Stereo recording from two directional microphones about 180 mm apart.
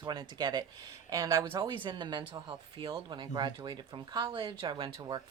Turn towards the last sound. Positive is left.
turn(degrees=-25)  # may be behind; listen again after turning